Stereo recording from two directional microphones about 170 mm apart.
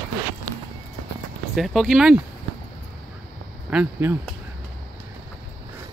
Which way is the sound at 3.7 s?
10° right (ahead or behind).